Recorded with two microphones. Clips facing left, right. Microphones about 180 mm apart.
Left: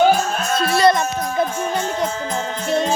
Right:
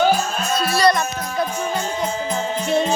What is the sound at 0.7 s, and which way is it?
Speech, 20° left (ahead or behind).